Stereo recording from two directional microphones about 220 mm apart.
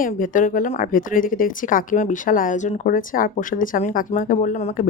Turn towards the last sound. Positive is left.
turn(degrees=35)  # may be behind; listen again after turning